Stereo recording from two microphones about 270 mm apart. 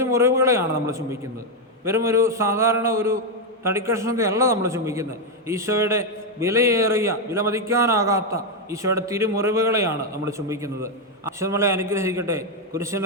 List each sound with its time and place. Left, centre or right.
0.0 s a man's voice: centre